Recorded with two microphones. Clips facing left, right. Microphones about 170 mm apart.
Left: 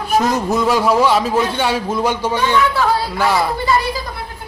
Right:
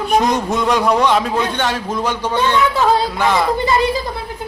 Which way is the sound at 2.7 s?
20° right (ahead or behind).